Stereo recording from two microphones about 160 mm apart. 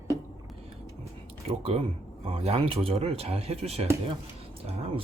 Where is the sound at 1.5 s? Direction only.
40° right (ahead or behind).